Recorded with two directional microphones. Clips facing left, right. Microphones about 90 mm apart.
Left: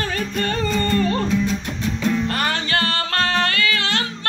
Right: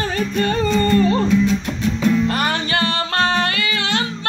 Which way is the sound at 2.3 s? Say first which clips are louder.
Right 2 dB; 20° right (ahead or behind).